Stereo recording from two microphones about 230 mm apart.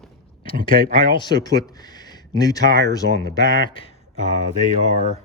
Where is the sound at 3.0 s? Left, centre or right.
Left.